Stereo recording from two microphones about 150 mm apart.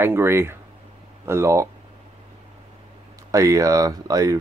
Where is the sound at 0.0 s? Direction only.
15° right (ahead or behind).